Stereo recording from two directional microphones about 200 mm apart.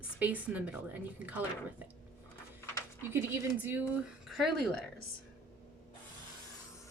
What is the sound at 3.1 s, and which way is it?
Speech, 10° right (ahead or behind).